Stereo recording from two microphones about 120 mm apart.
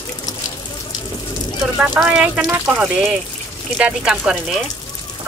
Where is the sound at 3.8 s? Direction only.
5° right (ahead or behind).